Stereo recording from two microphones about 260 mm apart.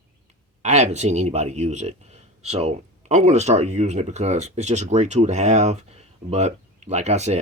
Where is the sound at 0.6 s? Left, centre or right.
Right.